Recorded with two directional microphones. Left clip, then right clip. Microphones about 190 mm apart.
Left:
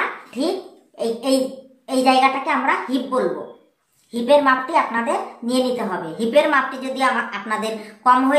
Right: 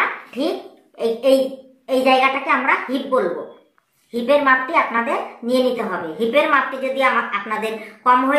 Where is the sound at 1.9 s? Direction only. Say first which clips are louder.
Right 1 dB; 35° left (ahead or behind).